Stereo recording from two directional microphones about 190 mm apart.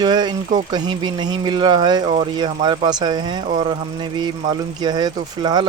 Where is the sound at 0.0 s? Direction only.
20° right (ahead or behind).